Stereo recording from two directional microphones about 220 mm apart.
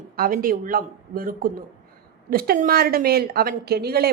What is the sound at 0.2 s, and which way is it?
A man's voice, 40° right (ahead or behind).